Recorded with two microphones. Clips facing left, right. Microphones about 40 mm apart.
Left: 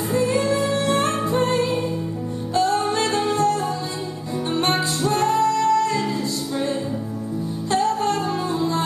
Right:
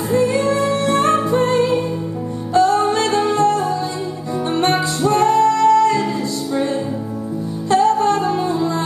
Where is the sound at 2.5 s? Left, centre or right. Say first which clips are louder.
Right 6 dB; right.